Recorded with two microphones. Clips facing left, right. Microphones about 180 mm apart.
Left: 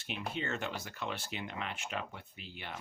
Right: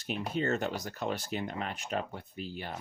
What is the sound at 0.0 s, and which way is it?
Speech, 40° right (ahead or behind).